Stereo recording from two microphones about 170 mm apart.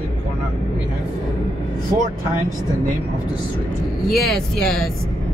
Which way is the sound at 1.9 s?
15° right (ahead or behind).